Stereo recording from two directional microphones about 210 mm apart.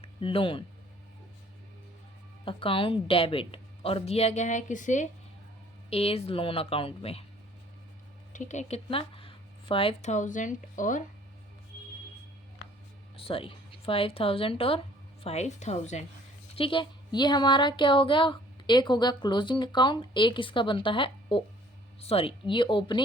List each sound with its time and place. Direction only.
0.0 s speech: 25° left (ahead or behind)
2.4 s speech: 25° left (ahead or behind)
8.3 s speech: 35° left (ahead or behind)
13.1 s a woman's voice: 25° left (ahead or behind)